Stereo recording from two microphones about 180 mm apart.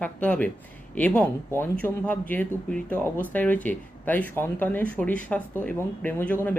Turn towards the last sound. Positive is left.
turn(degrees=10)  # may be behind; listen again after turning